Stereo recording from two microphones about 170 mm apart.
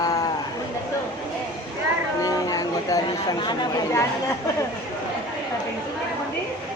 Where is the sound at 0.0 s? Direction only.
20° left (ahead or behind).